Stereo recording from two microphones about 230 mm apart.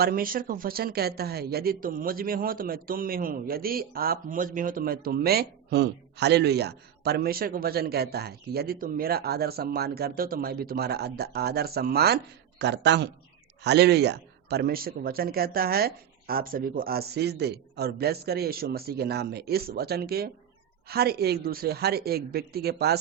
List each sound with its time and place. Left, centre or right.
0.0 s a man's voice: right